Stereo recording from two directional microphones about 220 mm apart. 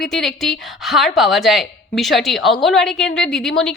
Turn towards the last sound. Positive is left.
turn(degrees=0)  # may be behind; listen again after turning